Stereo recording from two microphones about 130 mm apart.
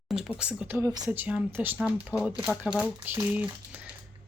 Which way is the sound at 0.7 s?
30° right (ahead or behind).